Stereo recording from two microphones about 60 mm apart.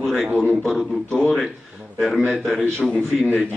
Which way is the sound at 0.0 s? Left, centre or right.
Centre.